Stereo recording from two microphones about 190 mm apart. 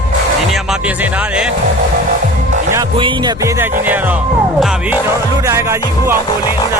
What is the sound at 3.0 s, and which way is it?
Music, 20° right (ahead or behind).